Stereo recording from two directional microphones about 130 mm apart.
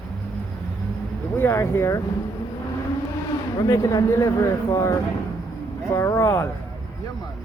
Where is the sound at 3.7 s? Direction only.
30° left (ahead or behind).